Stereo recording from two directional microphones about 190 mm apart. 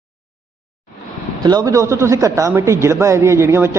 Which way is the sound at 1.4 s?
20° right (ahead or behind).